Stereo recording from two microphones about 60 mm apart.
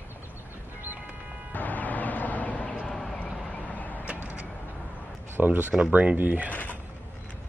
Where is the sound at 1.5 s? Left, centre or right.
Left.